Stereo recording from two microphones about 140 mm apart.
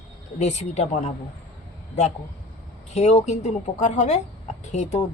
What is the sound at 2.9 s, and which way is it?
A woman's voice, 50° left (ahead or behind).